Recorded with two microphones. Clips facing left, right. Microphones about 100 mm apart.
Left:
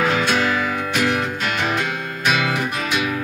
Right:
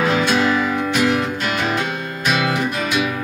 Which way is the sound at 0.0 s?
20° right (ahead or behind).